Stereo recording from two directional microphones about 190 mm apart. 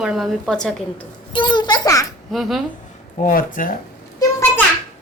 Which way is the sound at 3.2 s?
45° left (ahead or behind).